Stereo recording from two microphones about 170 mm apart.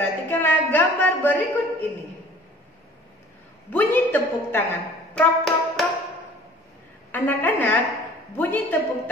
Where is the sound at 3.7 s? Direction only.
10° left (ahead or behind).